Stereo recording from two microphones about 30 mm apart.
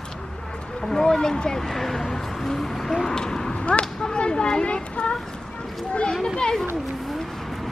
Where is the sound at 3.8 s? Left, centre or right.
Left.